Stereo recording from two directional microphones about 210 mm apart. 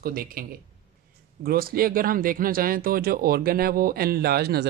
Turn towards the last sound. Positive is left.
turn(degrees=-50)  # may be behind; listen again after turning